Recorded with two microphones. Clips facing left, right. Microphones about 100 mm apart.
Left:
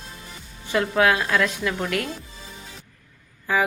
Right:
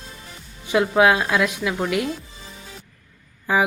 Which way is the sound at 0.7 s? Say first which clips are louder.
Right 3 dB; 15° right (ahead or behind).